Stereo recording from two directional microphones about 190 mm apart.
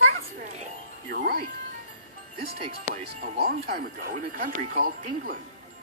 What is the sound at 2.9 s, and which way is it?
Speech, 45° right (ahead or behind).